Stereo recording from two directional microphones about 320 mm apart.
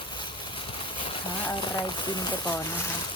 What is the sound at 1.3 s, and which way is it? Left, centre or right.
Speech, centre.